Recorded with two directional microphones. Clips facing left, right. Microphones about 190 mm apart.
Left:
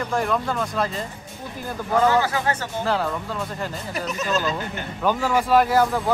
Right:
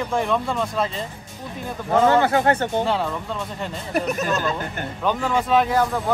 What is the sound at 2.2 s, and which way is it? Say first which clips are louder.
Speech: right 6 dB; 60° right (ahead or behind).